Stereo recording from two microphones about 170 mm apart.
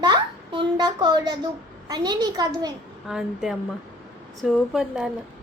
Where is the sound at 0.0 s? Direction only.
25° right (ahead or behind).